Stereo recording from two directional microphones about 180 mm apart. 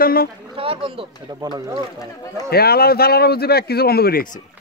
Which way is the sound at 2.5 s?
60° left (ahead or behind).